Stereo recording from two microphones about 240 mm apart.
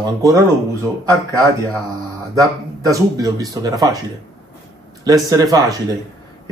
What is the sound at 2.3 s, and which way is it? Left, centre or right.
Speech, centre.